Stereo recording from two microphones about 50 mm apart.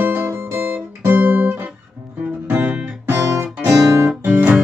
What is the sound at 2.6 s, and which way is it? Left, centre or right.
Guitar, right.